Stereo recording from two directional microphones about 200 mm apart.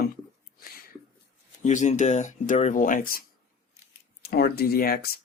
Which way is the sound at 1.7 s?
35° left (ahead or behind).